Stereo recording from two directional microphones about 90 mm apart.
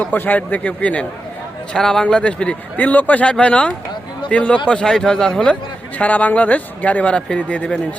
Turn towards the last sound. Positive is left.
turn(degrees=10)  # may be behind; listen again after turning